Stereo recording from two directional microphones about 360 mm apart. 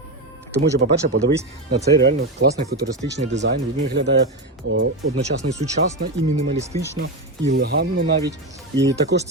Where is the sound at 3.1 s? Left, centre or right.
Right.